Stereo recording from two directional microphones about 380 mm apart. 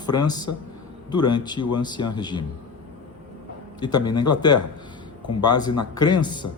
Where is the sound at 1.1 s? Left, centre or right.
Centre.